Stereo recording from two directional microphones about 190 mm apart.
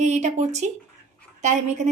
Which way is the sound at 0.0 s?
35° right (ahead or behind).